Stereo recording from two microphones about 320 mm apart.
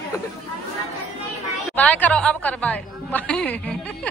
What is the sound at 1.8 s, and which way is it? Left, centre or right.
A woman's voice, centre.